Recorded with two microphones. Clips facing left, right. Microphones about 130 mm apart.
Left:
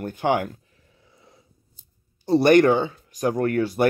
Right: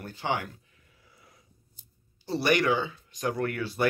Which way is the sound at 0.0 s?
55° left (ahead or behind).